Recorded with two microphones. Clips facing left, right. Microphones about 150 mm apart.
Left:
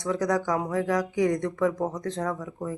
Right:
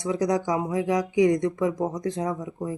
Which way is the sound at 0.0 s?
15° right (ahead or behind).